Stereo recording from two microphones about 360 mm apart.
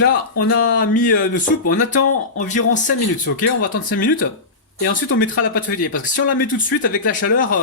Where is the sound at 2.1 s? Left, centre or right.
Centre.